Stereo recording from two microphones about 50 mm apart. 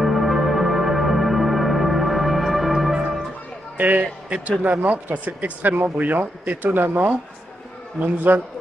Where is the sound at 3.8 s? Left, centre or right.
Right.